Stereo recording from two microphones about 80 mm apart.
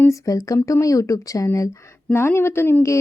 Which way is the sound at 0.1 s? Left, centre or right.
Left.